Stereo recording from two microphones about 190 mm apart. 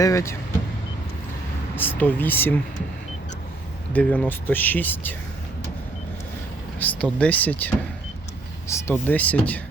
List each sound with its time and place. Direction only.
0.0 s speech: 15° left (ahead or behind)
1.7 s speech: 10° left (ahead or behind)
3.9 s speech: 5° left (ahead or behind)
6.7 s speech: 5° left (ahead or behind)